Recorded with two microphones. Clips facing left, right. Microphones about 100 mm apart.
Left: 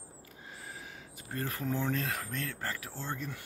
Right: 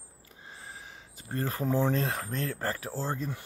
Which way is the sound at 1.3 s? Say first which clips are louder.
Right 5 dB; 30° right (ahead or behind).